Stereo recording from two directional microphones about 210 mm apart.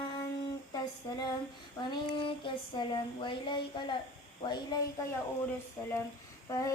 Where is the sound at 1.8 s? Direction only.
20° left (ahead or behind).